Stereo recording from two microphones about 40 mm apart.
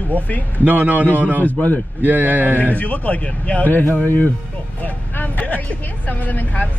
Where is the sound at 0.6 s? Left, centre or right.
Right.